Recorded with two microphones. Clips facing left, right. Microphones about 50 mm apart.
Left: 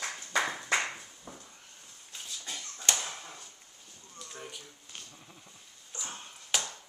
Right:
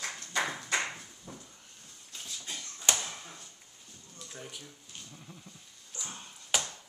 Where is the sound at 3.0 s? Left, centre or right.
Centre.